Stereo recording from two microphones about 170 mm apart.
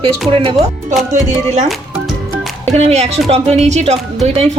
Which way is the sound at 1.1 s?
45° right (ahead or behind).